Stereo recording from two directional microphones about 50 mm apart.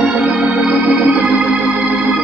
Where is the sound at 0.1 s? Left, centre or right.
Right.